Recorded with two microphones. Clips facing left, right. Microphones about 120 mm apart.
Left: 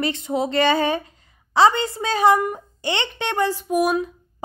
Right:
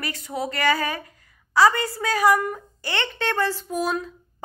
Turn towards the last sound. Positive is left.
turn(degrees=15)  # may be behind; listen again after turning